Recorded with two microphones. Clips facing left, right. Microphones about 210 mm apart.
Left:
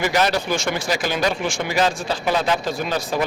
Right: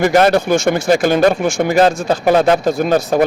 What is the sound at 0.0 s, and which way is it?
Speech, 50° right (ahead or behind).